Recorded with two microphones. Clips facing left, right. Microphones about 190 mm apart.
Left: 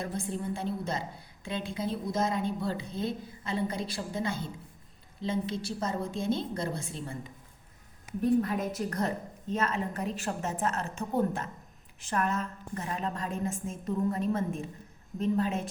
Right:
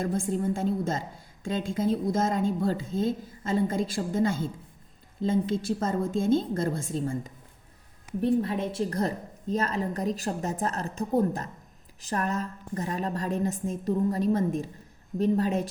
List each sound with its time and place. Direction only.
0.0 s a woman's voice: 45° right (ahead or behind)
8.2 s a woman's voice: 30° right (ahead or behind)